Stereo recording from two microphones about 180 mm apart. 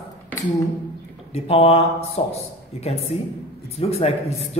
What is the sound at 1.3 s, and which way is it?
A man's voice, 35° left (ahead or behind).